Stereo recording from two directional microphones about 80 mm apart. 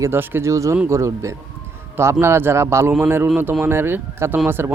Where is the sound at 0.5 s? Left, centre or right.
Right.